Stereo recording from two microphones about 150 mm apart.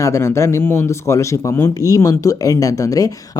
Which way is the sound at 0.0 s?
20° left (ahead or behind).